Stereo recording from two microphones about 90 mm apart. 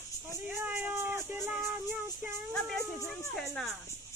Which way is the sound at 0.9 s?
30° right (ahead or behind).